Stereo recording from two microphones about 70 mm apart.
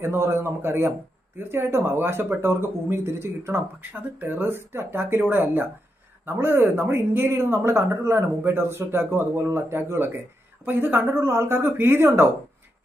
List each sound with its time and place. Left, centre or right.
0.0 s speech: right